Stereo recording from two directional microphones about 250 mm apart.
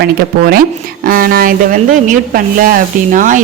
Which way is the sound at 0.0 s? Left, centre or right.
Right.